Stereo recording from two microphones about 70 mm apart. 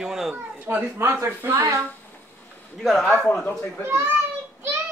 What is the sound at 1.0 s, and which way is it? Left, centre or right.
Speech, right.